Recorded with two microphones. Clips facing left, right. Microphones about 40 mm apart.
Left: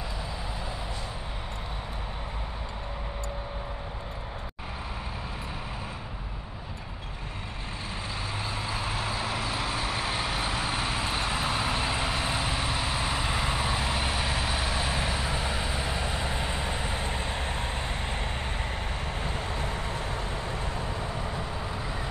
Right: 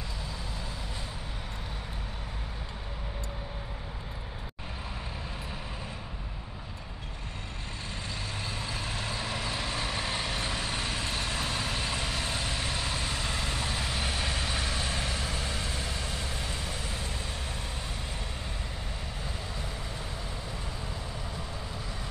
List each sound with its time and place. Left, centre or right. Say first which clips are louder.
8.5 s vehicle: left 4 dB; centre; by 17.6 s left
19.2 s vehicle: left 6 dB; left